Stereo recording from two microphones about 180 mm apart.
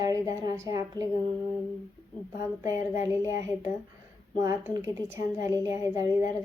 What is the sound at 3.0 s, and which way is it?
Speech, 15° right (ahead or behind).